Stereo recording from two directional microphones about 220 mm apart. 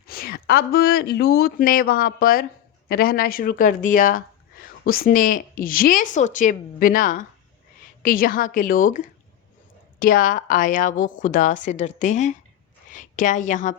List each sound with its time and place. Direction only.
0.1 s a woman's voice: 40° left (ahead or behind)